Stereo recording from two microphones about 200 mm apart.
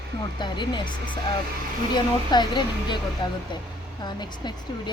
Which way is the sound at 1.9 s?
20° left (ahead or behind).